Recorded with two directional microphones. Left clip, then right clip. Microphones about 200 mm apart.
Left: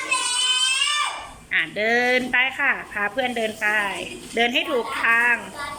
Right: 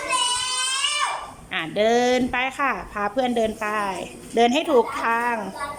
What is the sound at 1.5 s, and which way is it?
A woman's voice, 15° right (ahead or behind).